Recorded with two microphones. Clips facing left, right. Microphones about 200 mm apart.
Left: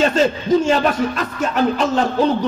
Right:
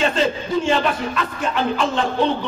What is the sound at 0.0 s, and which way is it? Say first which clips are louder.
A man's voice: left 4 dB; 40° left (ahead or behind).